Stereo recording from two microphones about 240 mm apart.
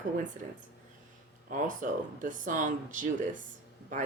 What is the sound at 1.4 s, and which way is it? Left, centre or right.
Speech, right.